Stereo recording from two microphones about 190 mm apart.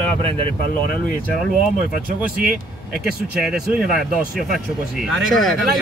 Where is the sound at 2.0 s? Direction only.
50° right (ahead or behind).